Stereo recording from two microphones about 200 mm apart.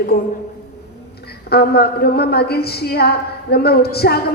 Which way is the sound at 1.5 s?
50° left (ahead or behind).